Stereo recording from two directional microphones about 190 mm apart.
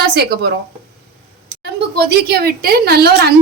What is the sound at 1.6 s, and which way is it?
A woman's voice, 55° right (ahead or behind).